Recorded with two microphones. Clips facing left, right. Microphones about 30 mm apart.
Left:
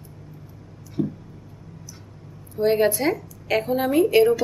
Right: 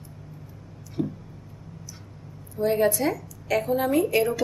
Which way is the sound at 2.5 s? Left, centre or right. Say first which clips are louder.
Left 3 dB; left.